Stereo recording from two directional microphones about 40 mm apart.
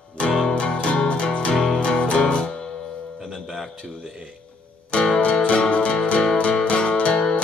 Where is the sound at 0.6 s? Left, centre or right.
Left.